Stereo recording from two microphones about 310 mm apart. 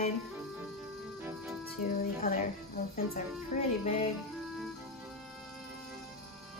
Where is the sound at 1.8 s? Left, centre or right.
Left.